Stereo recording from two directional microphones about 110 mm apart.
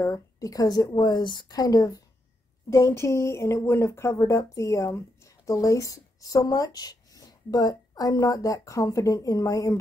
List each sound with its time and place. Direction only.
0.0 s a woman's voice: 30° left (ahead or behind)